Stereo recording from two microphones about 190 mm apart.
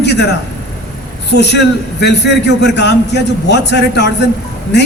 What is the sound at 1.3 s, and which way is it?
A man's voice, 65° left (ahead or behind).